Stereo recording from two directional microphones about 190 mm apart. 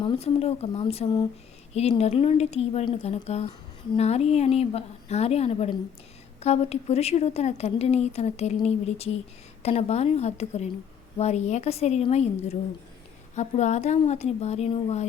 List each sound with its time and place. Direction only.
0.0 s speech: 30° left (ahead or behind)